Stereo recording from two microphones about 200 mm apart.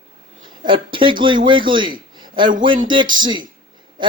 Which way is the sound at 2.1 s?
20° right (ahead or behind).